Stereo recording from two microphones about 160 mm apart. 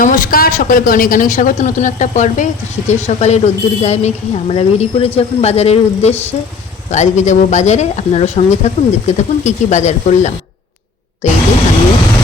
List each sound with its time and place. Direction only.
0.0 s speech: 60° left (ahead or behind)